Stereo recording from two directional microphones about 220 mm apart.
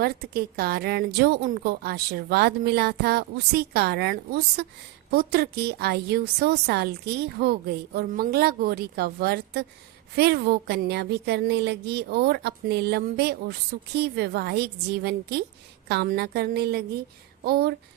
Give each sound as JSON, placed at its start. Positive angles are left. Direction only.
{"t": 0.0, "sound": "a woman's voice", "side_deg": -45}